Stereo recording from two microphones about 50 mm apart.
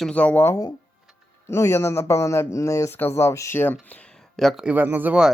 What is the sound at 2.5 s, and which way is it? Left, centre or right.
Speech, left.